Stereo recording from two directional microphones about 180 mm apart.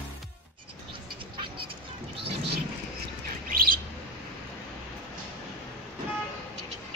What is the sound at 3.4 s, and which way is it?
Bird, 55° right (ahead or behind).